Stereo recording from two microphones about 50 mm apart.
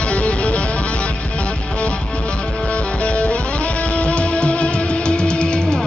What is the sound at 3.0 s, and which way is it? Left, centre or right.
Music, left.